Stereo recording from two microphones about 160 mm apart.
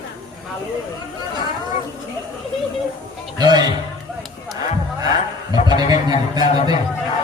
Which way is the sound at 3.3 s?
25° right (ahead or behind).